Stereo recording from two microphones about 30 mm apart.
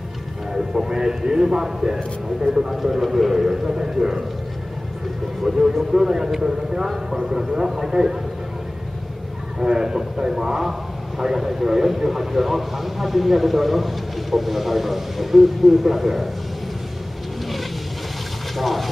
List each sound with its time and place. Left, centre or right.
0.8 s a man's voice: right
2.7 s a man's voice: centre
5.5 s a man's voice: centre
9.6 s a man's voice: right; by 16.3 s centre
18.6 s speech: centre